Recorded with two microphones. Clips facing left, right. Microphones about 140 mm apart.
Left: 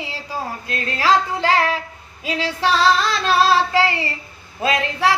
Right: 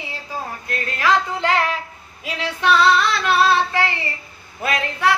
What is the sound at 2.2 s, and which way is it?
Female singing, 30° left (ahead or behind).